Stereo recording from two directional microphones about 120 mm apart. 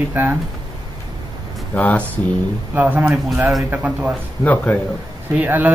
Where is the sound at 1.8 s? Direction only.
10° left (ahead or behind).